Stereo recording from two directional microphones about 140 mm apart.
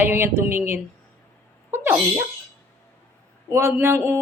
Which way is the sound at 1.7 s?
15° right (ahead or behind).